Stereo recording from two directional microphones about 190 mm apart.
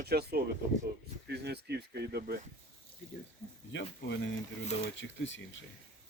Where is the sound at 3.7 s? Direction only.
70° left (ahead or behind).